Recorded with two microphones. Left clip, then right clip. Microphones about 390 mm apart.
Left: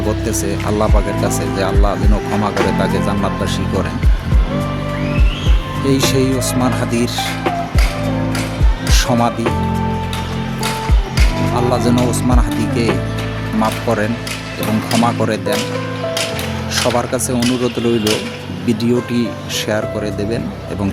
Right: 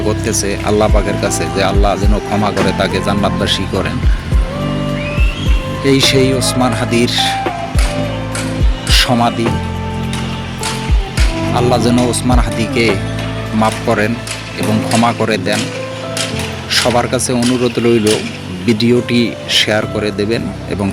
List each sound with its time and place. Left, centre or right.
0.3 s speech: left
5.8 s speech: left
8.9 s music: left
11.5 s speech: left
16.7 s speech: left